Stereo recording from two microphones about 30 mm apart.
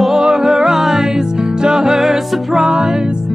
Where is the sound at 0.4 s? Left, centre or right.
Centre.